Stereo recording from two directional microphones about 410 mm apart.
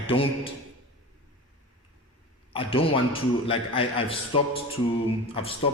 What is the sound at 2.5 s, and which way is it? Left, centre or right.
A man's voice, centre.